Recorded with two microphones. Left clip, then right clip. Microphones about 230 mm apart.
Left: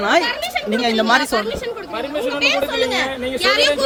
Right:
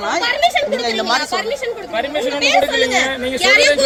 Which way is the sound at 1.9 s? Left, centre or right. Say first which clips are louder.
Right 3 dB; left.